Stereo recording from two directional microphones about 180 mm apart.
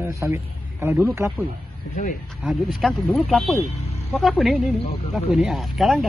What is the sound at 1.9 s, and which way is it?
Speech, 45° left (ahead or behind).